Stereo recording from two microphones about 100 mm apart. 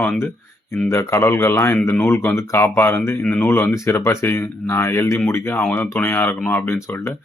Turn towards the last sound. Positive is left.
turn(degrees=20)  # may be behind; listen again after turning